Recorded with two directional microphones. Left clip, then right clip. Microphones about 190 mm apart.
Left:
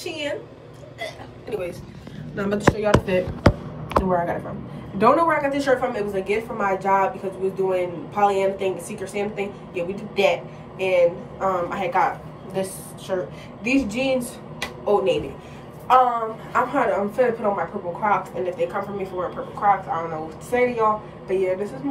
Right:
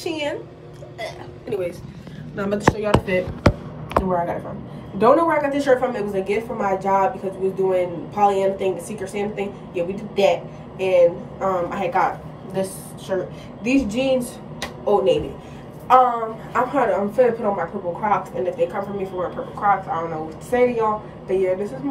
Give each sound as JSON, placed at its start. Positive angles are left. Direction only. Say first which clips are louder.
{"t": 2.3, "sound": "speech", "louder": "right 1 dB", "side_deg": -10}
{"t": 2.9, "sound": "a woman's voice", "louder": "even", "side_deg": 10}